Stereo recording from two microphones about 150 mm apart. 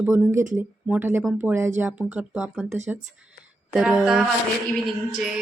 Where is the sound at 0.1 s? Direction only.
20° right (ahead or behind).